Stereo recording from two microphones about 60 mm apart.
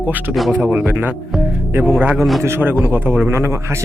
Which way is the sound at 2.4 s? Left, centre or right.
Right.